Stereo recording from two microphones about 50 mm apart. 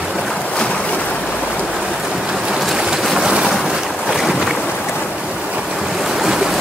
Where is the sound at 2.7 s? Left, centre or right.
Centre.